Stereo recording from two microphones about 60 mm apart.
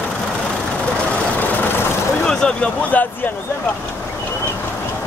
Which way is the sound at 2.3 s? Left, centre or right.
Centre.